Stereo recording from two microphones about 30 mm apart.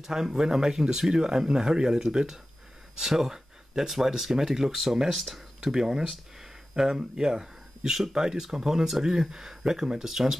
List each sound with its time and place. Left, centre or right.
0.0 s speech: centre